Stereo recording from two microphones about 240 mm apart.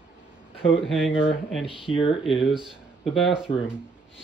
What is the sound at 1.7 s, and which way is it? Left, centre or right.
Speech, left.